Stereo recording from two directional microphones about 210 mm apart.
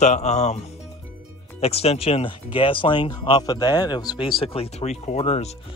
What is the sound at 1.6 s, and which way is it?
Speech, 30° left (ahead or behind).